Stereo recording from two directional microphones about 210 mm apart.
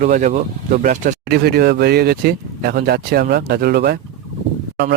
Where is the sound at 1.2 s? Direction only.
50° right (ahead or behind).